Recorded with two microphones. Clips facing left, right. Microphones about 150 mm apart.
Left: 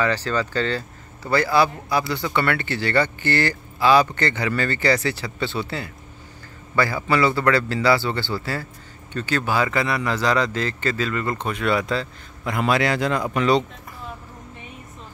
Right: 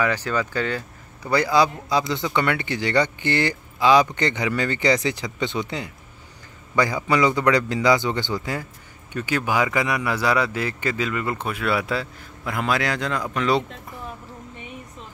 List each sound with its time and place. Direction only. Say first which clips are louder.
0.0 s speech: left 1 dB; 10° right (ahead or behind)